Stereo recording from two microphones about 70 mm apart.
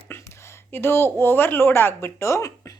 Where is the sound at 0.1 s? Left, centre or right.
Left.